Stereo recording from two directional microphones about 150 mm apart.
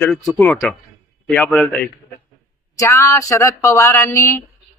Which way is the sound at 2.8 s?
20° left (ahead or behind).